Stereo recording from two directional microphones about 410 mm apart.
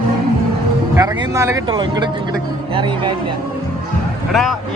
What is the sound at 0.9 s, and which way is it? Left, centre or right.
Speech, centre.